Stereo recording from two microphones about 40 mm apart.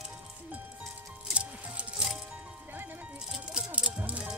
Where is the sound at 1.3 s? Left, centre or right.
Right.